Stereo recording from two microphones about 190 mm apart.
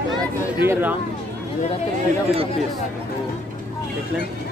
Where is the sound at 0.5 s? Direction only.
10° right (ahead or behind).